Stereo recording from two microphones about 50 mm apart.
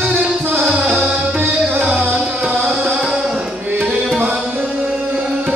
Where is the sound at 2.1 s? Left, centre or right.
Right.